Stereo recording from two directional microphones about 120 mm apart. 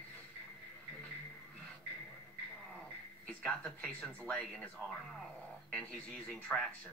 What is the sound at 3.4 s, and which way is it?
Speech, 10° left (ahead or behind).